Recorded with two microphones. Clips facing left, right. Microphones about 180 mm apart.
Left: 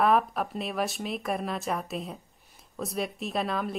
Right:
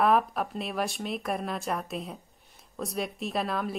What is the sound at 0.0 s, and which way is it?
Speech, centre (ahead or behind).